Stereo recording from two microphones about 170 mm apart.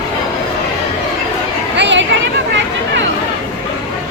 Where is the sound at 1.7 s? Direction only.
90° right.